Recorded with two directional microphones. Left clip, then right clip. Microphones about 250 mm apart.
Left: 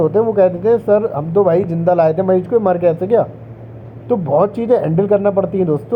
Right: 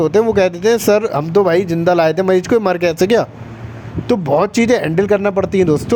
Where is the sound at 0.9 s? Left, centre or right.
Right.